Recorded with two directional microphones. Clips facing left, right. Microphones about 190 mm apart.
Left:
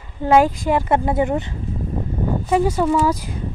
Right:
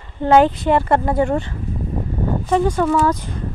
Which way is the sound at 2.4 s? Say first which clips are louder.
Right 1 dB; 10° left (ahead or behind).